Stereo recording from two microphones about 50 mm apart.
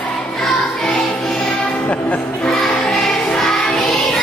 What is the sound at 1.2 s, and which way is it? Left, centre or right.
Music, centre.